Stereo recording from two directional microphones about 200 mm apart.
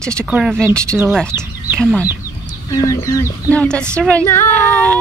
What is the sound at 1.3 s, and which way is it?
Chicken, 10° right (ahead or behind).